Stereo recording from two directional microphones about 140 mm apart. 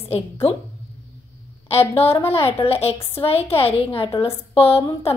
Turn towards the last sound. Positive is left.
turn(degrees=45)  # may be behind; listen again after turning